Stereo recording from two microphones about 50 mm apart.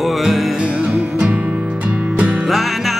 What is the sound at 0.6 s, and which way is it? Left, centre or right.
Music, right.